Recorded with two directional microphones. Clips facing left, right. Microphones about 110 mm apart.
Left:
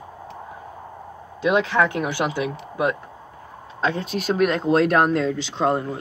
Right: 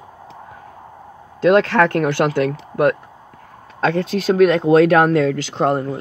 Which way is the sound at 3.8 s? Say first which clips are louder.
Right 6 dB; 90° right.